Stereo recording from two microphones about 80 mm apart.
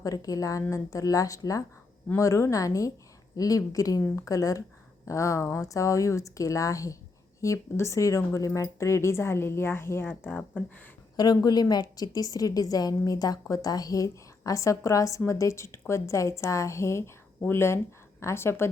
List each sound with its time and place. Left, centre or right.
0.0 s a woman's voice: left; by 10.6 s centre
11.4 s a woman's voice: left